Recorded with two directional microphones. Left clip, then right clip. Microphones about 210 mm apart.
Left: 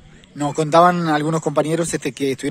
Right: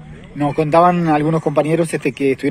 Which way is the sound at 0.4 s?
30° left (ahead or behind).